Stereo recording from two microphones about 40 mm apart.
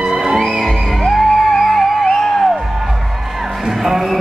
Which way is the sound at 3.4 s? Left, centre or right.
Centre.